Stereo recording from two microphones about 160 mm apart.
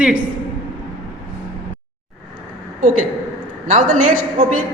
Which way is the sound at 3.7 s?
55° right (ahead or behind).